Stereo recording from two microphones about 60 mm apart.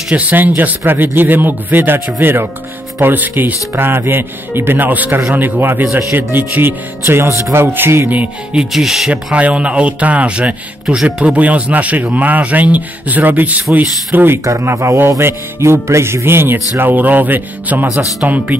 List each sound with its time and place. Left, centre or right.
0.1 s speech: right
8.5 s speech: centre
9.1 s speech: right
13.7 s speech: right
14.4 s music: right
16.7 s speech: right